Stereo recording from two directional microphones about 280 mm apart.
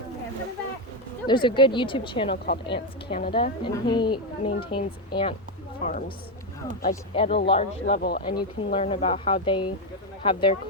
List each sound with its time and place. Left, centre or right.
1.3 s a woman's voice: centre
7.9 s speech: left
8.3 s speech: centre